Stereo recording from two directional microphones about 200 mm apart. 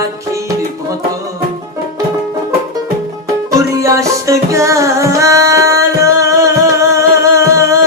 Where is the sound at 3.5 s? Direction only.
15° right (ahead or behind).